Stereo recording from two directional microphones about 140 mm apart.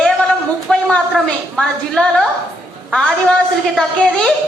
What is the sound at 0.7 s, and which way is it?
A man's voice, 5° left (ahead or behind).